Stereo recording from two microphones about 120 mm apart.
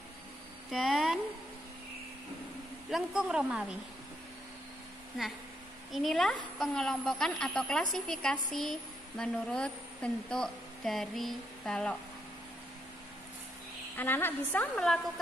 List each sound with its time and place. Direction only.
0.7 s speech: centre (ahead or behind)
2.9 s a woman's voice: 5° right (ahead or behind)
5.9 s speech: centre (ahead or behind)
13.9 s a woman's voice: 15° left (ahead or behind)